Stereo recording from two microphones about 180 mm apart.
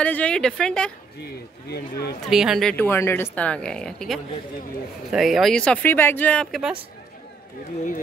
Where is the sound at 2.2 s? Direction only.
Centre (ahead or behind).